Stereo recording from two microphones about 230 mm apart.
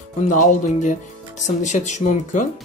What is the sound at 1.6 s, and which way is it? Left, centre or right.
Speech, left.